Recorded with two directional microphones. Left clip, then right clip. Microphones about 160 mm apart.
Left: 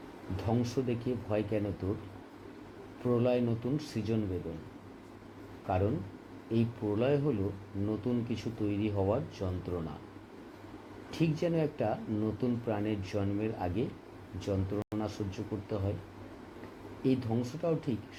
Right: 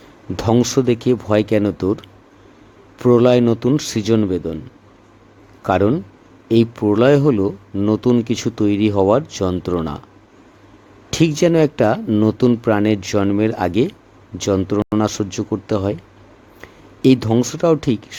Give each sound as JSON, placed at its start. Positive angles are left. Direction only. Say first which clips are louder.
{"t": 0.3, "sound": "speech", "louder": "right 17 dB", "side_deg": -90}
{"t": 3.0, "sound": "speech", "louder": "right 17 dB", "side_deg": -90}
{"t": 5.6, "sound": "speech", "louder": "right 16 dB", "side_deg": -90}
{"t": 11.1, "sound": "speech", "louder": "right 17 dB", "side_deg": -90}
{"t": 17.0, "sound": "speech", "louder": "right 18 dB", "side_deg": -90}